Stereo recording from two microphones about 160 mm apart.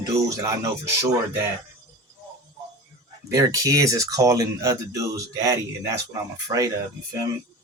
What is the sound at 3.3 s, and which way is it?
Speech, 20° right (ahead or behind).